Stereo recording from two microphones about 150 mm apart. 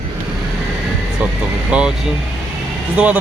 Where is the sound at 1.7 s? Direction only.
10° right (ahead or behind).